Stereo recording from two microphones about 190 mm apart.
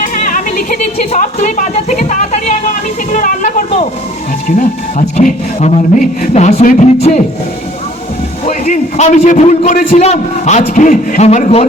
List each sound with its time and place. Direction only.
0.0 s a man's voice: 45° left (ahead or behind)
8.4 s a man's voice: 40° left (ahead or behind)